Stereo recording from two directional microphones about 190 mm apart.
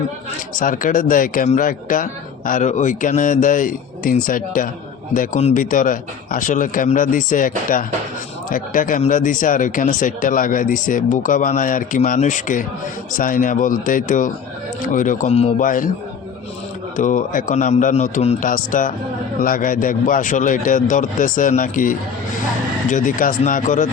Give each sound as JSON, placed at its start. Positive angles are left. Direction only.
{"t": 0.5, "sound": "speech", "side_deg": 45}
{"t": 15.6, "sound": "speech", "side_deg": 45}
{"t": 17.0, "sound": "a man's voice", "side_deg": 40}